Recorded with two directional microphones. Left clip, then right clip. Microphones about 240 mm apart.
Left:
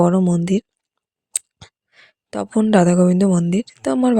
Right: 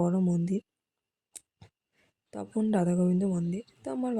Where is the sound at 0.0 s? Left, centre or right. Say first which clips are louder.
Left 13 dB; left.